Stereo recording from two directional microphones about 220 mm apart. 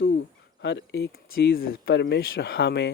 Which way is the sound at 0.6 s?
50° left (ahead or behind).